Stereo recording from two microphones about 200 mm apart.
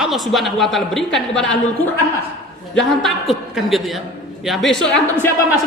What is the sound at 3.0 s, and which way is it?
Speech, centre (ahead or behind).